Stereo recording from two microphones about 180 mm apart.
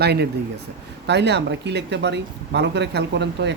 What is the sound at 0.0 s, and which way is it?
Speech, 65° right (ahead or behind).